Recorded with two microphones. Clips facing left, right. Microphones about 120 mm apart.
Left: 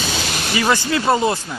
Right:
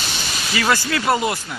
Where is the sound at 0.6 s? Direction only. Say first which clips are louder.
Left 2 dB; 20° left (ahead or behind).